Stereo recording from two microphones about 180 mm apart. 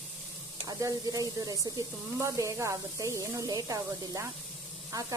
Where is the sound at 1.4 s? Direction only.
20° right (ahead or behind).